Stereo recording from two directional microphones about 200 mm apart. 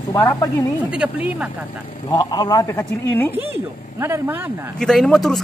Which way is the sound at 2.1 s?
20° left (ahead or behind).